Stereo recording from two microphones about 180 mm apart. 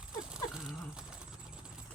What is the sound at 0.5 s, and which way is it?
Dog, 5° right (ahead or behind).